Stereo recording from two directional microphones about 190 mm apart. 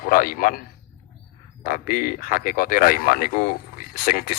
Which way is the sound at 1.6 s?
50° left (ahead or behind).